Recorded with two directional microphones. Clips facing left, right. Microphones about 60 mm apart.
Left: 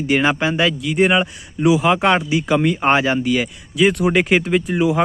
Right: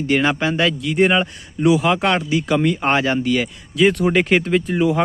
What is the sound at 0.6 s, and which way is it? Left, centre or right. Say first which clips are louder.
Speech: even; centre.